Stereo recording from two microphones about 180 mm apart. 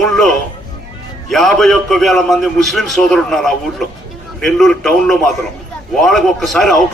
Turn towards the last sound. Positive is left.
turn(degrees=0)  # may be behind; listen again after turning